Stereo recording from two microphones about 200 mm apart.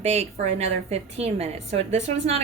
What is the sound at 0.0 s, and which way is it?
A woman's voice, 30° right (ahead or behind).